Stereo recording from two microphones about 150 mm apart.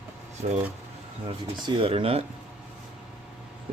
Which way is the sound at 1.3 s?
40° right (ahead or behind).